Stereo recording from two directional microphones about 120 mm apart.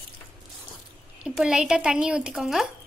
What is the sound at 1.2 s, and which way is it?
A woman's voice, 5° right (ahead or behind).